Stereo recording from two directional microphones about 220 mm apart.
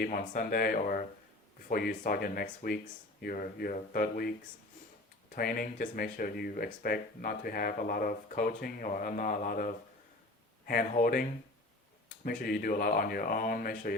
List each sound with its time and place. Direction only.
0.0 s speech: 40° left (ahead or behind)